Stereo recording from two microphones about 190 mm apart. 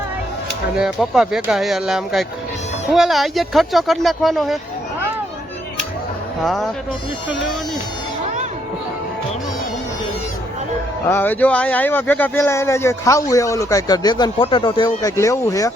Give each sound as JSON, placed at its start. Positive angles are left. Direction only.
{"t": 0.8, "sound": "speech", "side_deg": -5}
{"t": 6.4, "sound": "speech", "side_deg": 0}
{"t": 11.1, "sound": "speech", "side_deg": 10}